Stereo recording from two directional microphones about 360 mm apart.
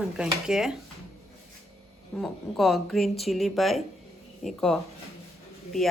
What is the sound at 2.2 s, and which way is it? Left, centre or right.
Speech, centre.